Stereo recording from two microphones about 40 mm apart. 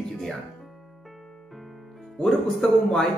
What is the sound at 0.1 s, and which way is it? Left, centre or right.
Music, centre.